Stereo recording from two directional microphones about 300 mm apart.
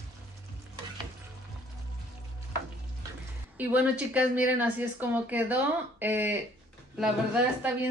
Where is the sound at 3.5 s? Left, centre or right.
Centre.